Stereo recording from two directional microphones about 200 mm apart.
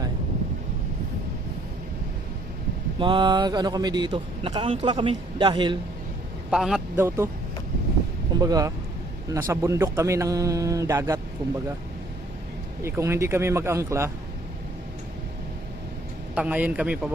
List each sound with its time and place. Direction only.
3.0 s speech: 25° right (ahead or behind)
6.5 s speech: centre (ahead or behind)
8.4 s speech: 20° right (ahead or behind)
12.8 s speech: 15° right (ahead or behind)
16.3 s speech: 5° right (ahead or behind)